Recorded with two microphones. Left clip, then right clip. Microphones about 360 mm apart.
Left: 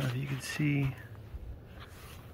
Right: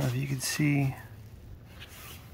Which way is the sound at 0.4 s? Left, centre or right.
Centre.